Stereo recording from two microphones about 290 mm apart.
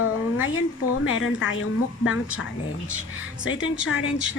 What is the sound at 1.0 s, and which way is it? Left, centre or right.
Speech, left.